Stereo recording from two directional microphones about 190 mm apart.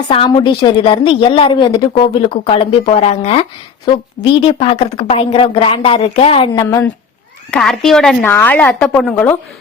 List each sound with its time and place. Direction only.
0.1 s a woman's voice: 25° left (ahead or behind)
6.7 s a woman's voice: 15° left (ahead or behind)
7.5 s a woman's voice: 5° left (ahead or behind)